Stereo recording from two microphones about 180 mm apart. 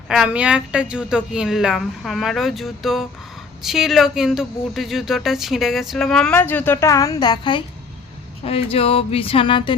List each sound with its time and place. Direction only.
0.1 s speech: 5° right (ahead or behind); by 9.7 s 30° left (ahead or behind)